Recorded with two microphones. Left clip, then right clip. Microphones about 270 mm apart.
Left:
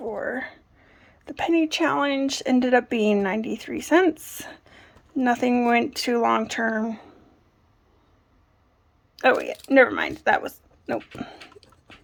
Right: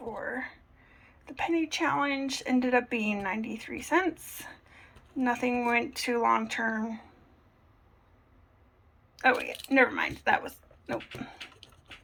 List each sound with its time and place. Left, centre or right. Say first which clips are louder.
0.3 s a sound: left 6 dB; left
2.6 s speech: left 8 dB; left
9.1 s speech: left 6 dB; left